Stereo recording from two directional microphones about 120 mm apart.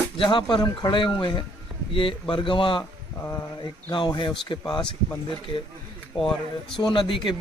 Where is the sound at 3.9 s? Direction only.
40° left (ahead or behind).